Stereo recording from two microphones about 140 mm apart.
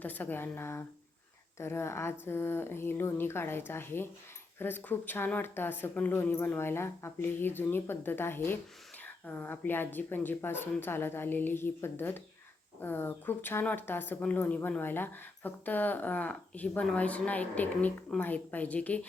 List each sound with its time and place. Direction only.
0.0 s speech: 10° left (ahead or behind)